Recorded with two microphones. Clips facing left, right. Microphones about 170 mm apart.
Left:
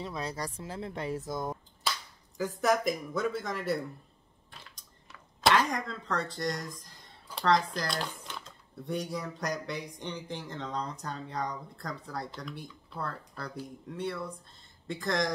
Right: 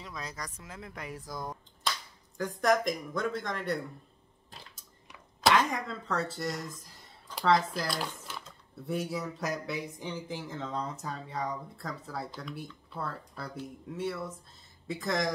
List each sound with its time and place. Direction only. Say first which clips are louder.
0.0 s speech: left 6 dB; 30° left (ahead or behind)
1.8 s finger snapping: even; 5° left (ahead or behind)
2.3 s speech: right 1 dB; 5° left (ahead or behind)
5.4 s speech: even; centre (ahead or behind)